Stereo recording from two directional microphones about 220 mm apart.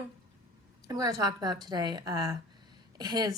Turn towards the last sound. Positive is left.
turn(degrees=-20)  # may be behind; listen again after turning